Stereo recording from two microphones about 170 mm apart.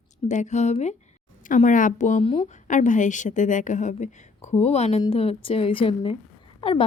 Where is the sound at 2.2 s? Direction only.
35° left (ahead or behind).